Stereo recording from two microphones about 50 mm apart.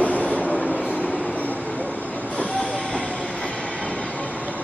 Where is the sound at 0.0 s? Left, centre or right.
Left.